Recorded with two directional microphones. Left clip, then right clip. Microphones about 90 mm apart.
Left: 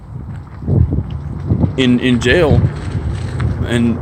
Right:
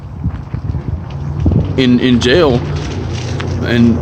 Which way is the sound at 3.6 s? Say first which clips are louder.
Right 4 dB; 35° right (ahead or behind).